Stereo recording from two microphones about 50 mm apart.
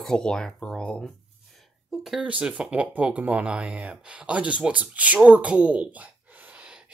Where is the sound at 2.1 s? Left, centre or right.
Right.